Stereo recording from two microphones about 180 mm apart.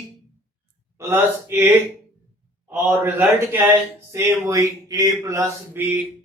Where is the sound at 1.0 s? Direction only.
15° right (ahead or behind).